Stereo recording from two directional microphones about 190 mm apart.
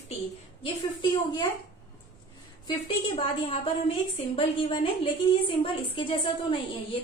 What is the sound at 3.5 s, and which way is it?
A woman's voice, 30° left (ahead or behind).